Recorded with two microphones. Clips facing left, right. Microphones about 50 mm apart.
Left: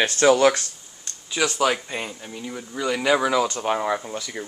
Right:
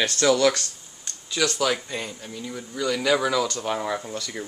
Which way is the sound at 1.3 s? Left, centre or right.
Centre.